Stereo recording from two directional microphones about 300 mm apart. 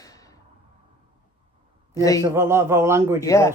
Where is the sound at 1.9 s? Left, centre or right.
Centre.